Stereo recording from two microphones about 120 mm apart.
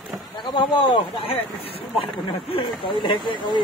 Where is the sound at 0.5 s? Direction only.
40° left (ahead or behind).